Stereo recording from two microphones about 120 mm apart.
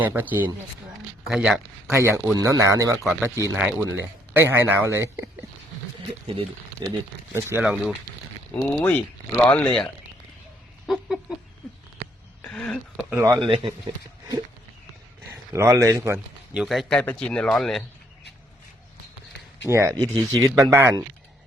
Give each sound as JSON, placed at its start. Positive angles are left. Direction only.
{"t": 0.0, "sound": "speech", "side_deg": -15}
{"t": 1.9, "sound": "speech", "side_deg": -20}
{"t": 3.0, "sound": "speech", "side_deg": -5}
{"t": 3.2, "sound": "speech", "side_deg": -25}
{"t": 6.8, "sound": "speech", "side_deg": -35}
{"t": 7.6, "sound": "speech", "side_deg": -5}
{"t": 8.6, "sound": "speech", "side_deg": 15}
{"t": 10.8, "sound": "a sound", "side_deg": 0}
{"t": 12.4, "sound": "a sound", "side_deg": 10}
{"t": 13.4, "sound": "speech", "side_deg": -45}
{"t": 15.3, "sound": "speech", "side_deg": -25}
{"t": 16.6, "sound": "speech", "side_deg": 0}
{"t": 19.7, "sound": "speech", "side_deg": -25}